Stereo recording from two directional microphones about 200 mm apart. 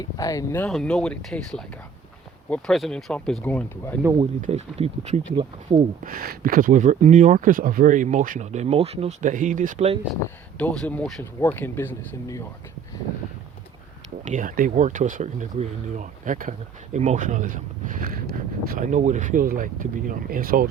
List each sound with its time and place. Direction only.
0.0 s speech: 15° left (ahead or behind)
4.4 s speech: 35° right (ahead or behind)
6.1 s speech: 45° right (ahead or behind)
10.6 s speech: 5° left (ahead or behind)
14.3 s speech: 40° right (ahead or behind)